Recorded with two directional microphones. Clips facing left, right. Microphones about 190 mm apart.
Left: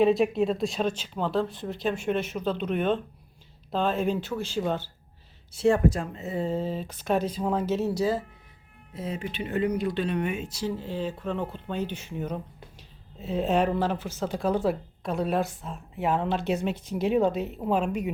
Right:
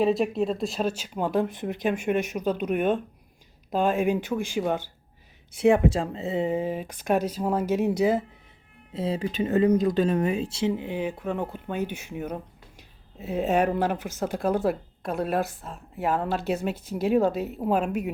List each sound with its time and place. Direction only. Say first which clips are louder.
0.0 s speech: left 1 dB; centre (ahead or behind); by 8.2 s 20° right (ahead or behind)
8.9 s speech: right 5 dB; 30° right (ahead or behind); by 18.1 s 5° right (ahead or behind)